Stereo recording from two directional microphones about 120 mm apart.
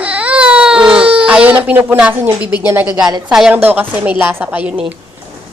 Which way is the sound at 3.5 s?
15° right (ahead or behind).